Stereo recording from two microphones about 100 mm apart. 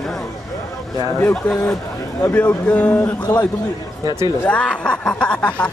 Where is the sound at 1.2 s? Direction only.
15° left (ahead or behind).